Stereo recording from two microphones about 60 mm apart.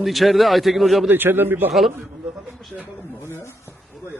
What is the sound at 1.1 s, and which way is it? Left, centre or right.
Speech, right.